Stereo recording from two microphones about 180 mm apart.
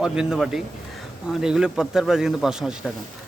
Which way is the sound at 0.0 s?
5° right (ahead or behind).